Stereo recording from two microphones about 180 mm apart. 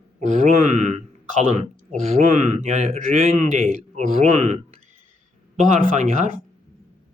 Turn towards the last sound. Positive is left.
turn(degrees=-40)  # may be behind; listen again after turning